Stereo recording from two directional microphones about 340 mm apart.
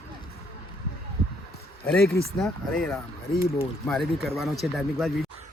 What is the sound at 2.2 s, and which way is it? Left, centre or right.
Speech, centre.